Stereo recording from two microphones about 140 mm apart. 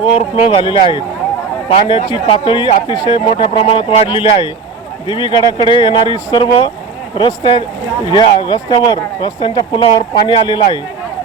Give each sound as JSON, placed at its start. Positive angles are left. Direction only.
{"t": 0.2, "sound": "speech", "side_deg": 45}
{"t": 3.2, "sound": "speech", "side_deg": 45}